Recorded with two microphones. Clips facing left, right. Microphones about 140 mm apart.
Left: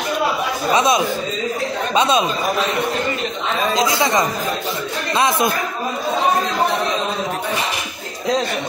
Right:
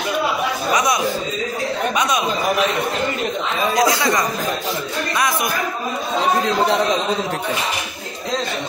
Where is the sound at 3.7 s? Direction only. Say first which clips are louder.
Right 1 dB; 20° left (ahead or behind).